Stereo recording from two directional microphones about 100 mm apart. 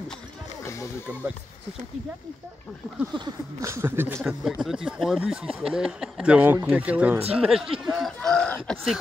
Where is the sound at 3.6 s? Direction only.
30° right (ahead or behind).